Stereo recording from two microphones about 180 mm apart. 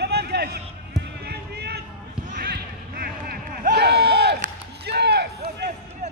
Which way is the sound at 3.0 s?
55° right (ahead or behind).